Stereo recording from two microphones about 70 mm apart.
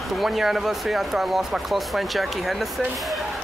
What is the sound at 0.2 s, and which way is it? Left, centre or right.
Speech, centre.